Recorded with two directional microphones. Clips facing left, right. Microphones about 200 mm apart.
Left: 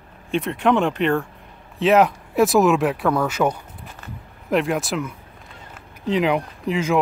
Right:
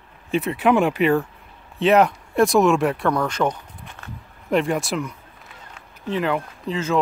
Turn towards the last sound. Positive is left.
turn(degrees=10)  # may be behind; listen again after turning